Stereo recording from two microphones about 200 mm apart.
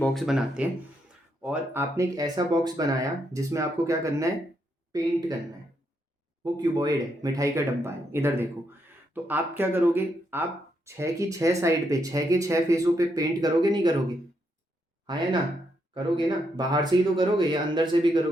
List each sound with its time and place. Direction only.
0.0 s speech: centre (ahead or behind); by 5.1 s 20° right (ahead or behind)
6.4 s speech: 20° right (ahead or behind)
15.0 s speech: 20° right (ahead or behind)